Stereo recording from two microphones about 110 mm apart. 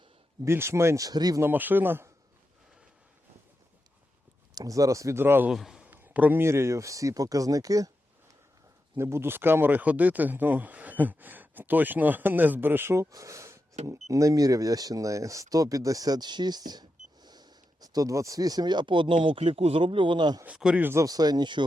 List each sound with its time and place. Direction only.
0.4 s speech: 25° right (ahead or behind)
1.4 s speech: 15° right (ahead or behind)
4.5 s speech: 30° right (ahead or behind)
5.5 s a man's voice: 5° right (ahead or behind)
5.8 s speech: 15° right (ahead or behind); by 7.9 s 30° right (ahead or behind)
9.0 s speech: 25° right (ahead or behind); by 20.4 s 45° right (ahead or behind)
20.4 s speech: 10° right (ahead or behind)
20.8 s speech: 25° right (ahead or behind)